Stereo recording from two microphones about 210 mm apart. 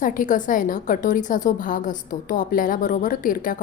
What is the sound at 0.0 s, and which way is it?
A woman's voice, 40° left (ahead or behind).